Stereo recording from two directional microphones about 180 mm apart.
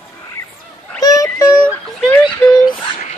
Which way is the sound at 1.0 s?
20° left (ahead or behind).